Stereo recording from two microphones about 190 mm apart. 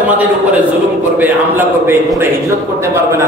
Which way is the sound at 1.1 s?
10° right (ahead or behind).